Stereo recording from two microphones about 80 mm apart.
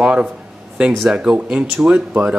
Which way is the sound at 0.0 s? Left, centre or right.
Centre.